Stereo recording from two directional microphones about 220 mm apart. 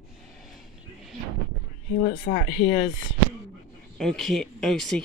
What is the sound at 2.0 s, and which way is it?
Speech, 45° left (ahead or behind).